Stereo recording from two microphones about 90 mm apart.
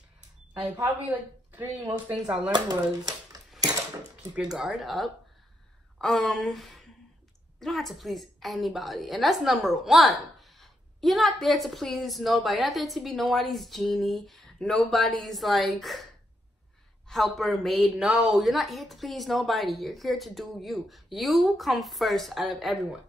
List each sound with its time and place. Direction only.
0.8 s speech: 20° right (ahead or behind)
2.5 s speech: 45° right (ahead or behind)
4.4 s a woman's voice: 5° right (ahead or behind)
17.1 s a woman's voice: centre (ahead or behind)